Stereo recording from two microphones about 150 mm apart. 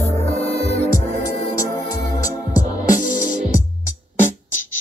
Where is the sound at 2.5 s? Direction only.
60° left (ahead or behind).